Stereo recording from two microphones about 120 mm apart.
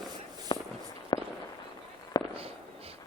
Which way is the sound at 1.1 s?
40° left (ahead or behind).